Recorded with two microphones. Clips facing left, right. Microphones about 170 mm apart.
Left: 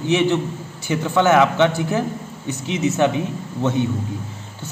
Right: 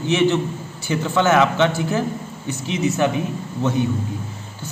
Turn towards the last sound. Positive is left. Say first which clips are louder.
# even
turn(degrees=25)  # may be behind; listen again after turning